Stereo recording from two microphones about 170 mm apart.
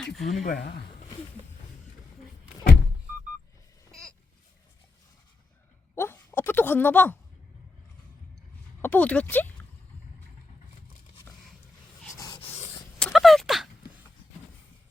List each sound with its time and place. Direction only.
0.0 s speech: 5° left (ahead or behind)
0.4 s speech: 65° left (ahead or behind)
5.9 s a sound: 10° left (ahead or behind)
8.8 s speech: 10° left (ahead or behind)
12.1 s rub: 25° left (ahead or behind)
13.0 s a sound: centre (ahead or behind)